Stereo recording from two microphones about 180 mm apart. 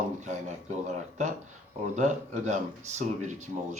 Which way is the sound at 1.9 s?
40° right (ahead or behind).